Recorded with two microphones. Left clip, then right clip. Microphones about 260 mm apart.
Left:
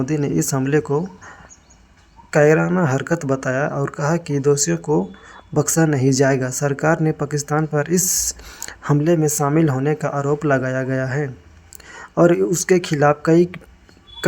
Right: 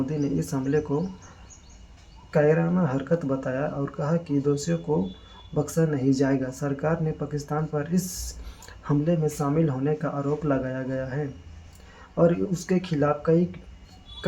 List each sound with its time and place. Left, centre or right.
0.0 s speech: left
2.3 s speech: left